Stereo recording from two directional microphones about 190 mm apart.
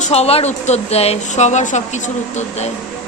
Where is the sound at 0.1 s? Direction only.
30° left (ahead or behind).